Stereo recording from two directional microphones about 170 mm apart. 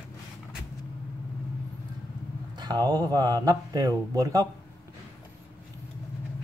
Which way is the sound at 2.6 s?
25° right (ahead or behind).